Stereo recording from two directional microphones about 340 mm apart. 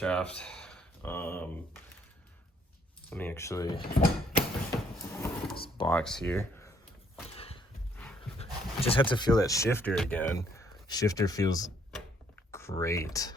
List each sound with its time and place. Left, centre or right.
0.0 s speech: centre
3.1 s speech: centre
3.8 s speech: left
5.1 s a sound: centre
5.6 s speech: centre
7.3 s a sound: centre
8.4 s speech: centre